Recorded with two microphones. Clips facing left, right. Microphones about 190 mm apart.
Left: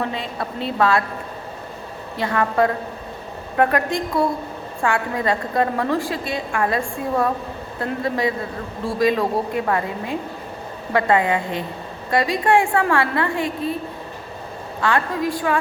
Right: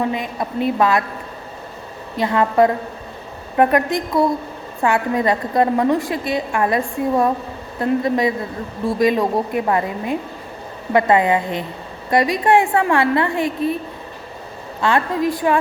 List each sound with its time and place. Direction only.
0.0 s a woman's voice: 15° right (ahead or behind)
2.1 s a woman's voice: 20° right (ahead or behind)
14.8 s a woman's voice: 20° right (ahead or behind)